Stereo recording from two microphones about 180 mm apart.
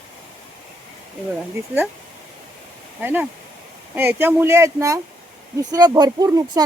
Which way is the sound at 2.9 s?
10° right (ahead or behind).